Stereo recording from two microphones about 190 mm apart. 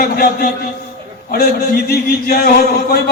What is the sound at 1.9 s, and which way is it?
A man's voice, 55° left (ahead or behind).